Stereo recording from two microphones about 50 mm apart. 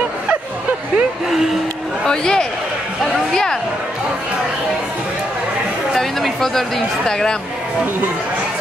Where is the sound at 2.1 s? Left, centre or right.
Centre.